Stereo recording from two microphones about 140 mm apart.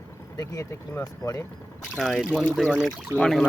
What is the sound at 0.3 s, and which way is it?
Speech, 20° left (ahead or behind).